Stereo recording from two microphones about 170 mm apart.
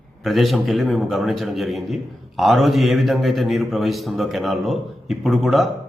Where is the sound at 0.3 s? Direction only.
Centre (ahead or behind).